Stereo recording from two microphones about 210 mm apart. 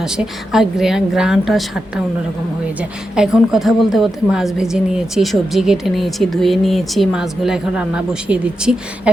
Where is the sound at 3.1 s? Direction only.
5° right (ahead or behind).